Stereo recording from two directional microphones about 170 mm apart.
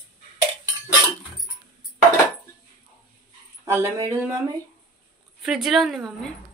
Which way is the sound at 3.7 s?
15° right (ahead or behind).